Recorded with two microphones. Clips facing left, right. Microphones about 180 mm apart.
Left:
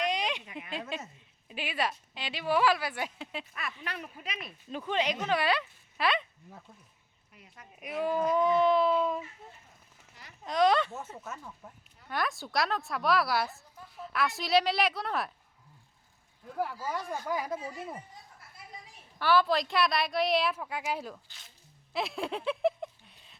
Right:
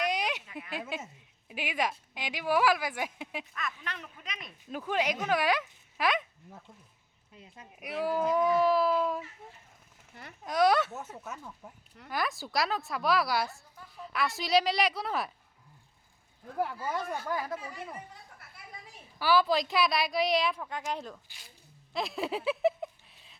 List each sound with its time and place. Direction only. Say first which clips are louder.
0.0 s a sound: even; 10° right (ahead or behind)
0.4 s a sound: even; 15° left (ahead or behind)
0.7 s a woman's voice: even; 10° right (ahead or behind)
3.5 s speech: even; 10° left (ahead or behind)
4.6 s a woman's voice: even; 5° right (ahead or behind)
7.3 s speech: right 3 dB; 25° right (ahead or behind)
7.8 s a woman's voice: even; 10° right (ahead or behind)
10.4 s a woman's voice: even; 10° right (ahead or behind)
16.8 s speech: right 1 dB; centre (ahead or behind)
17.2 s speech: left 1 dB; 15° left (ahead or behind)
18.3 s a sound: right 2 dB; 65° right (ahead or behind)
19.2 s speech: even; centre (ahead or behind)
21.9 s a sound: right 1 dB; centre (ahead or behind)